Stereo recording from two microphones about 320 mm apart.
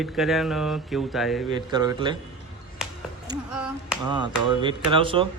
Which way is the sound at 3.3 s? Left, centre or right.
Centre.